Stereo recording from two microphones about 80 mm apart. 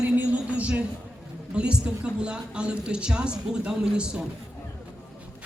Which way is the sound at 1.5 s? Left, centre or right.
Centre.